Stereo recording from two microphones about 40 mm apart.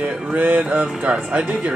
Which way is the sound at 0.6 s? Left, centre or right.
Right.